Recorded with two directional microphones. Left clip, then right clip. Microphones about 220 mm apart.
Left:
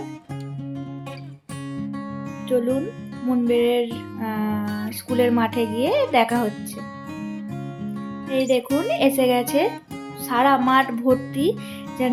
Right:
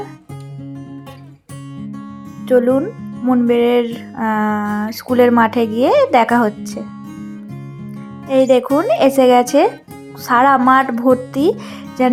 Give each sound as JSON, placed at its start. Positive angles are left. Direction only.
{"t": 2.5, "sound": "music", "side_deg": -20}
{"t": 8.3, "sound": "music", "side_deg": -20}